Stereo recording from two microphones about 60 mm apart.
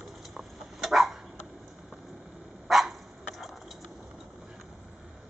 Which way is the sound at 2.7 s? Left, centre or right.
Centre.